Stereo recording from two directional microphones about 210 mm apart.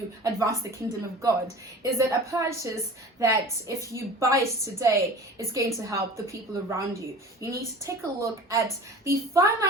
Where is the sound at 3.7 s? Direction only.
15° right (ahead or behind).